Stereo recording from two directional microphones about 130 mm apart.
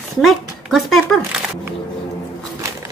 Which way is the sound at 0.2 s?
Centre (ahead or behind).